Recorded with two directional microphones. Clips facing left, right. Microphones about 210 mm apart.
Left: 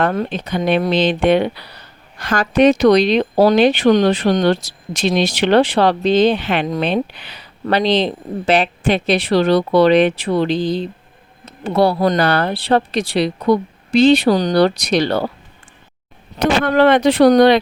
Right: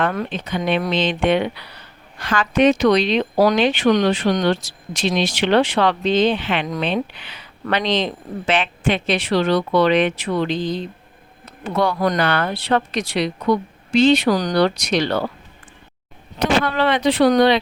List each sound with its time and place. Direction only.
0.0 s speech: 35° left (ahead or behind)
16.4 s speech: 50° left (ahead or behind)